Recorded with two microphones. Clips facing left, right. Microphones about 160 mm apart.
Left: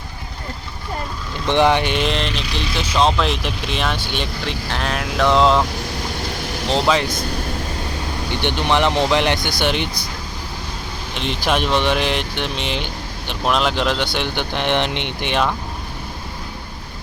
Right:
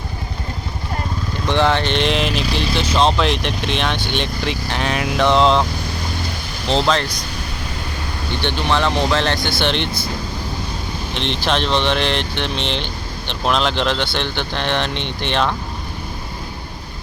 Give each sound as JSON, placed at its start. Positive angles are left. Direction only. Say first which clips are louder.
{"t": 1.5, "sound": "speech", "louder": "left 1 dB", "side_deg": 15}
{"t": 2.3, "sound": "speech", "louder": "right 5 dB", "side_deg": -40}
{"t": 2.6, "sound": "speech", "louder": "even", "side_deg": 0}
{"t": 6.7, "sound": "speech", "louder": "even", "side_deg": 5}
{"t": 8.3, "sound": "speech", "louder": "left 1 dB", "side_deg": 15}
{"t": 11.1, "sound": "speech", "louder": "even", "side_deg": 5}